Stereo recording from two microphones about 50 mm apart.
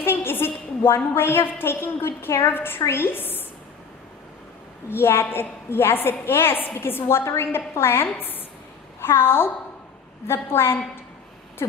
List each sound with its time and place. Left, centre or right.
0.0 s a sound: left
1.5 s a woman's voice: left
4.9 s a woman's voice: left
11.6 s speech: left